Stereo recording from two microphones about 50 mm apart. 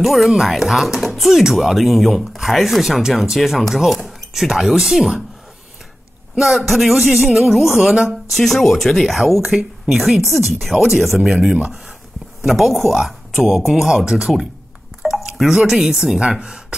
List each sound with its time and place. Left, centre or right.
0.0 s speech: centre
6.3 s speech: centre
11.1 s speech: centre
12.4 s speech: centre
15.1 s drip: centre
15.5 s speech: centre